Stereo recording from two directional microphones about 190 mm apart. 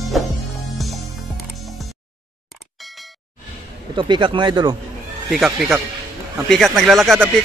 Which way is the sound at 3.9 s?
25° right (ahead or behind).